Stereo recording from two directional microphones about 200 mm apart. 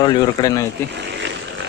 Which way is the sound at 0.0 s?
20° left (ahead or behind).